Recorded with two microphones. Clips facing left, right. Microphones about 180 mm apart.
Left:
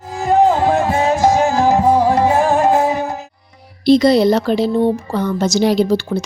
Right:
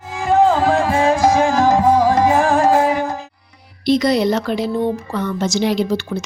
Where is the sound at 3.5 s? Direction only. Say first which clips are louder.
Left 5 dB; 30° left (ahead or behind).